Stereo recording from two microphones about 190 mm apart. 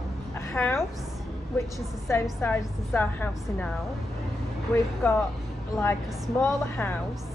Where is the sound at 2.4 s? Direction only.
10° left (ahead or behind).